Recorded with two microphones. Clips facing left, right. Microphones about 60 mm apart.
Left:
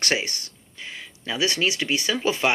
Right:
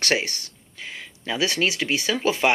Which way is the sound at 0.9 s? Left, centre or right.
Right.